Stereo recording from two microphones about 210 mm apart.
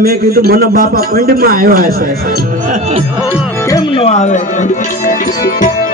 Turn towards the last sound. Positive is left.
turn(degrees=35)  # may be behind; listen again after turning